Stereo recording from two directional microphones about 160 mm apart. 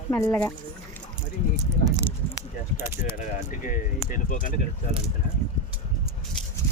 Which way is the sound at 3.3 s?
55° left (ahead or behind).